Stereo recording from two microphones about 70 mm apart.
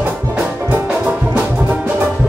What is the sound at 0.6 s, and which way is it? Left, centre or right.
Music, right.